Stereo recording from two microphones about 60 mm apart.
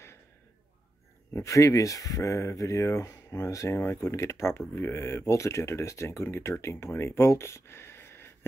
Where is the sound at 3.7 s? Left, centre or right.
Left.